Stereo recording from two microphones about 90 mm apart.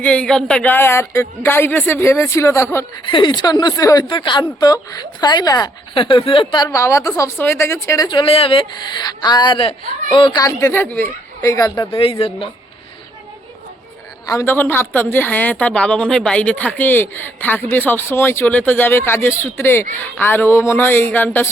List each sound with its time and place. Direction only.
0.0 s speech: 15° left (ahead or behind); by 2.6 s 35° left (ahead or behind)
3.1 s speech: 65° left (ahead or behind); by 4.0 s 45° left (ahead or behind)
4.0 s speech: 65° left (ahead or behind); by 5.7 s 50° left (ahead or behind)
5.9 s speech: 70° left (ahead or behind)
6.7 s speech: 35° left (ahead or behind)
8.0 s speech: 70° left (ahead or behind); by 8.6 s 85° left
8.7 s speech: 55° left (ahead or behind); by 9.9 s 85° left
10.2 s speech: 60° left (ahead or behind)
10.4 s speech: 35° left (ahead or behind)
10.8 s speech: 20° left (ahead or behind)
11.4 s speech: 40° left (ahead or behind)
11.9 s speech: 85° left
14.4 s speech: 25° left (ahead or behind)